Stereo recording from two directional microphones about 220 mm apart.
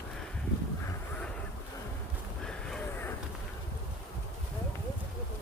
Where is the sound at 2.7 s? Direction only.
5° left (ahead or behind).